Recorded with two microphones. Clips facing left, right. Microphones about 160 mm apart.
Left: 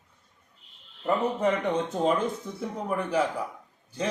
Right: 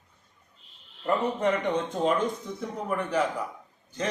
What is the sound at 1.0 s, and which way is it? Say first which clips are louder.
A man's voice: left 1 dB; 10° left (ahead or behind).